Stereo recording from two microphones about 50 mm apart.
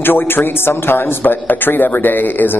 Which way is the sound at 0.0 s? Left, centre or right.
Left.